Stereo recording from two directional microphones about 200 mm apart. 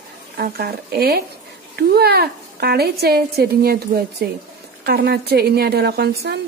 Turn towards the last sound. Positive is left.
turn(degrees=-55)  # may be behind; listen again after turning